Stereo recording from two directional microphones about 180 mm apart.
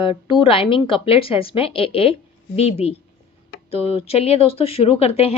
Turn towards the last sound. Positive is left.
turn(degrees=35)  # may be behind; listen again after turning